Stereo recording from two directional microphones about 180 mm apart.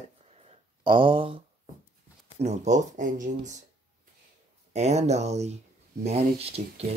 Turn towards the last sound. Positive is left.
turn(degrees=-35)  # may be behind; listen again after turning